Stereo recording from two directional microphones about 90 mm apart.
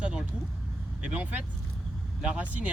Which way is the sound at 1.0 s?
15° right (ahead or behind).